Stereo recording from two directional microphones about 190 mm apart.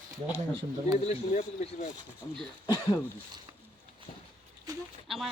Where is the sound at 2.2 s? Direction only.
15° left (ahead or behind).